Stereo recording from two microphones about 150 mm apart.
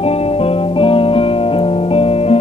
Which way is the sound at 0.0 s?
40° left (ahead or behind).